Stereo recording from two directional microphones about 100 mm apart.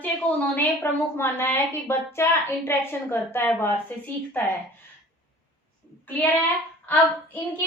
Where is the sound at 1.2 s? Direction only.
20° left (ahead or behind).